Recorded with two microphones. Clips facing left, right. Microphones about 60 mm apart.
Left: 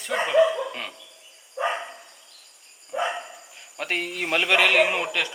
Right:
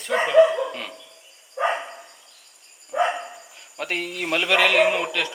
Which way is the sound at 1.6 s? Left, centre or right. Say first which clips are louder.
Right 3 dB; right.